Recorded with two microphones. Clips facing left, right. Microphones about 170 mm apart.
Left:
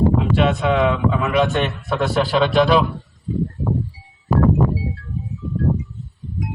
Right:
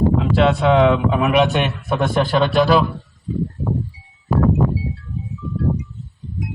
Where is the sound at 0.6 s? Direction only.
25° right (ahead or behind).